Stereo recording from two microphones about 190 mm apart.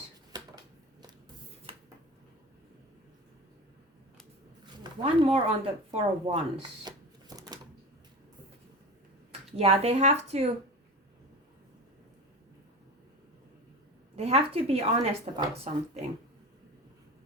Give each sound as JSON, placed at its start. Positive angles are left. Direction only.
{"t": 4.6, "sound": "a sound", "side_deg": -25}
{"t": 5.9, "sound": "shuffling cards", "side_deg": -30}
{"t": 9.6, "sound": "speech", "side_deg": -30}
{"t": 14.2, "sound": "a woman's voice", "side_deg": -30}